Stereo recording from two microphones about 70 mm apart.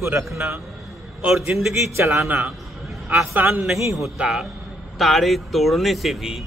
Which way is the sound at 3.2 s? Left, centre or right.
Right.